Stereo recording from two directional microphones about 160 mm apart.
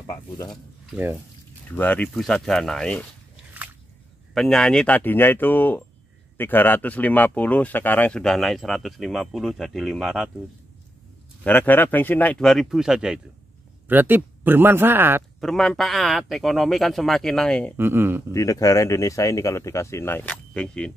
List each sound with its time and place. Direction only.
0.0 s speech: 20° left (ahead or behind)
1.7 s speech: 10° left (ahead or behind)
4.3 s speech: centre (ahead or behind)
11.4 s speech: 10° left (ahead or behind); by 15.2 s 15° right (ahead or behind)
15.4 s speech: centre (ahead or behind)
17.7 s speech: 15° right (ahead or behind)
18.3 s speech: 20° left (ahead or behind)